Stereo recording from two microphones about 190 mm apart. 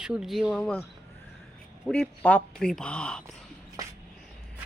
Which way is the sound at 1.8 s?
5° left (ahead or behind).